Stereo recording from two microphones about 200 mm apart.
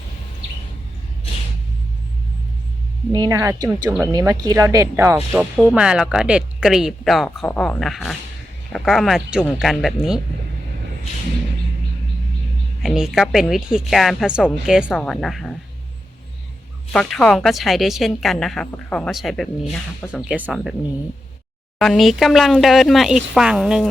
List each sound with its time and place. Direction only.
3.1 s speech: 20° right (ahead or behind)
5.1 s a woman's voice: 5° right (ahead or behind)
12.8 s a woman's voice: centre (ahead or behind)
16.9 s a woman's voice: 5° left (ahead or behind)
21.8 s a woman's voice: centre (ahead or behind)